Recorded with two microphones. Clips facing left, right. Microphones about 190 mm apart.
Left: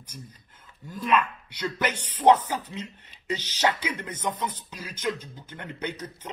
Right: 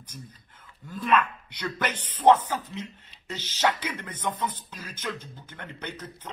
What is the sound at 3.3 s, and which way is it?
Speech, 10° left (ahead or behind).